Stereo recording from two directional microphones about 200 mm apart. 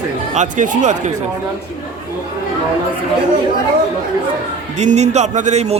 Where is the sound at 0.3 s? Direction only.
40° right (ahead or behind).